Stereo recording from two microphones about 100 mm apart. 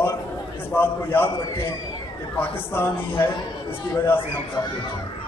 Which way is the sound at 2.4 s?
20° left (ahead or behind).